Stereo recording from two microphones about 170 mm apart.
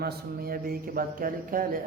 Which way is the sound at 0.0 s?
65° right (ahead or behind).